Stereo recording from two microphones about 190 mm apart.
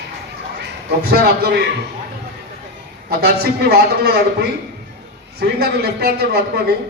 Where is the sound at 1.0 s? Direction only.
60° right (ahead or behind).